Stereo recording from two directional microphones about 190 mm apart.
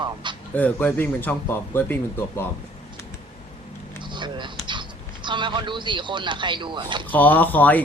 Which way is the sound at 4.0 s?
25° right (ahead or behind).